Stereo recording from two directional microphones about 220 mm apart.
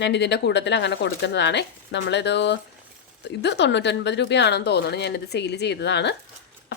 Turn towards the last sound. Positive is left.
turn(degrees=50)  # may be behind; listen again after turning